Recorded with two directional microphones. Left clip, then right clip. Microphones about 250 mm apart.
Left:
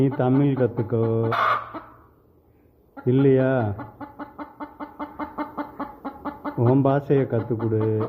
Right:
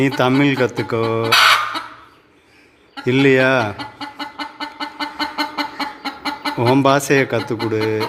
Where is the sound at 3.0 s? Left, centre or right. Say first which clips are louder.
Right 6 dB; centre.